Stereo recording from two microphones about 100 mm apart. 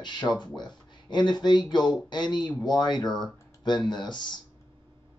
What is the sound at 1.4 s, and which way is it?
Speech, 50° left (ahead or behind).